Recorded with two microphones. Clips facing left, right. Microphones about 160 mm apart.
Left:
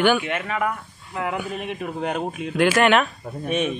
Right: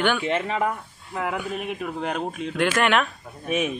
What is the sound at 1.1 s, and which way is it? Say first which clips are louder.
A man's voice: left 1 dB; centre (ahead or behind).